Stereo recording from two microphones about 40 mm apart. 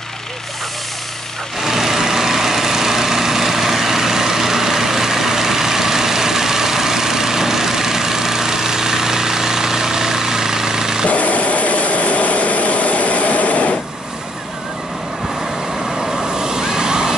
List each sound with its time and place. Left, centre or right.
1.6 s vehicle: centre
11.1 s vehicle: left
16.3 s waves: centre